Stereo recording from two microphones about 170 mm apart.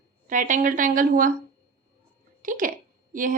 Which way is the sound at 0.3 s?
50° right (ahead or behind).